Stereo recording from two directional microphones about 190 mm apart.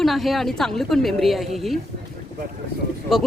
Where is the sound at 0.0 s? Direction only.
Centre (ahead or behind).